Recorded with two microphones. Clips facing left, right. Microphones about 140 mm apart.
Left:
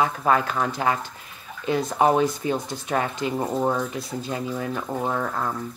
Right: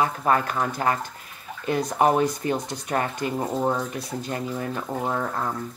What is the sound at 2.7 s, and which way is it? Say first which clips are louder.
Speech: left 1 dB; 15° right (ahead or behind).